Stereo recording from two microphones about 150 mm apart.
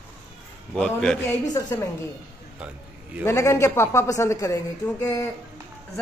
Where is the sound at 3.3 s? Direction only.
20° left (ahead or behind).